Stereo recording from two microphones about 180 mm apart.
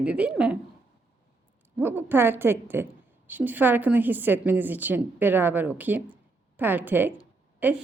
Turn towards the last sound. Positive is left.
turn(degrees=-10)  # may be behind; listen again after turning